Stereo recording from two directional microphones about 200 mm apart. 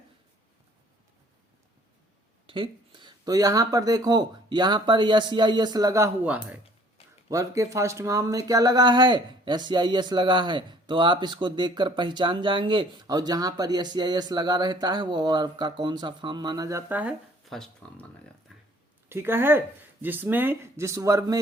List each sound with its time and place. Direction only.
2.5 s speech: 25° right (ahead or behind); by 18.0 s centre (ahead or behind)
18.5 s a sound: centre (ahead or behind)
19.0 s speech: 10° right (ahead or behind)